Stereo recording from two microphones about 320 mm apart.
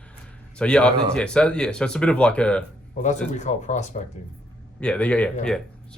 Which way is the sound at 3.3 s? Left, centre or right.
Left.